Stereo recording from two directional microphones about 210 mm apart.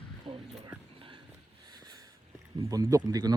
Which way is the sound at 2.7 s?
15° right (ahead or behind).